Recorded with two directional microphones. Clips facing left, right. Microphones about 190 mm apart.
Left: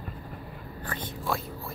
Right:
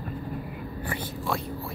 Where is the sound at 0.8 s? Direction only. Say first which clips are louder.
Right 2 dB; 10° right (ahead or behind).